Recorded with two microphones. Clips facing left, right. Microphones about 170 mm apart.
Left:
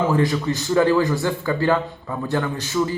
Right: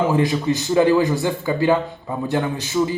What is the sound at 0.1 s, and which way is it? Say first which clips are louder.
A man's voice: right 1 dB; 20° right (ahead or behind).